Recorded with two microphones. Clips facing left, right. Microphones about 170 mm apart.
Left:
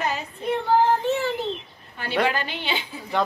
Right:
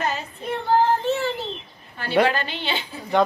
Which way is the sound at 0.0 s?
15° left (ahead or behind).